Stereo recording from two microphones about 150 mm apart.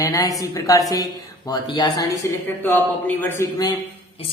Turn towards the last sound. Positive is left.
turn(degrees=10)  # may be behind; listen again after turning